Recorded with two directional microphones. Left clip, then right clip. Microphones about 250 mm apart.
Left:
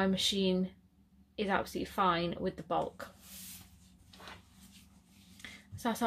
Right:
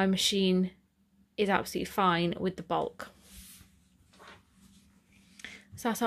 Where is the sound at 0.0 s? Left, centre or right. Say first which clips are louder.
Right 3 dB; right.